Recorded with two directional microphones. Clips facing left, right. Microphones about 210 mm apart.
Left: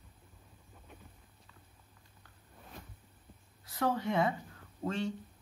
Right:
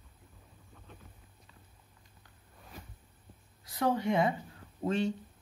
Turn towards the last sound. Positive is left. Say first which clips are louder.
# right 4 dB
turn(degrees=-20)  # may be behind; listen again after turning